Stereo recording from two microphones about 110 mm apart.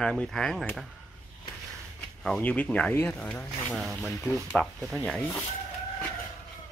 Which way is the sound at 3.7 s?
5° right (ahead or behind).